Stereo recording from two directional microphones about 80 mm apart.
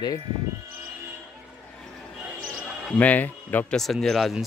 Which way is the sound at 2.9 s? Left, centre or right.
Centre.